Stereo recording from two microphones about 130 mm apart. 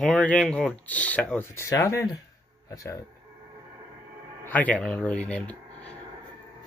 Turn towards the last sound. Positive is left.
turn(degrees=10)  # may be behind; listen again after turning